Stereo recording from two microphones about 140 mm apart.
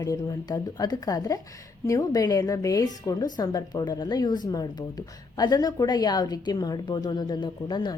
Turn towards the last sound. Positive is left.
turn(degrees=30)  # may be behind; listen again after turning